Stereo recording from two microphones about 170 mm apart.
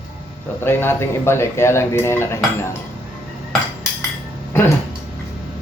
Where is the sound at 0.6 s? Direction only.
15° left (ahead or behind).